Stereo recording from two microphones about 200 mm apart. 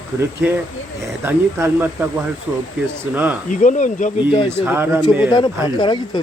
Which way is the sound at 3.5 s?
40° left (ahead or behind).